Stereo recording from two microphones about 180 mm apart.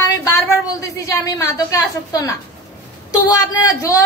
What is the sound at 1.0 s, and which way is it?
A woman's voice, 20° left (ahead or behind).